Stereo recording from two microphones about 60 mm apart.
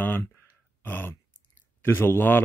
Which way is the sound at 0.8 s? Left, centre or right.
Left.